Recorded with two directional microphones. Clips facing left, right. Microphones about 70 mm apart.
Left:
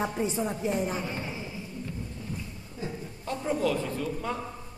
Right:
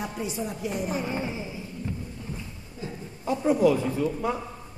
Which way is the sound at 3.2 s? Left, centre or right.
Centre.